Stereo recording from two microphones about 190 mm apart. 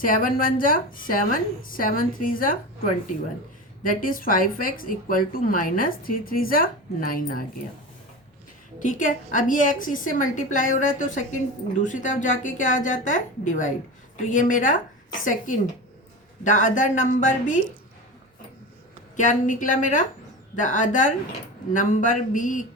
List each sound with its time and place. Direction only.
0.0 s speech: 45° left (ahead or behind)
3.8 s speech: 45° left (ahead or behind)
8.8 s speech: 45° left (ahead or behind)
19.1 s speech: 40° left (ahead or behind)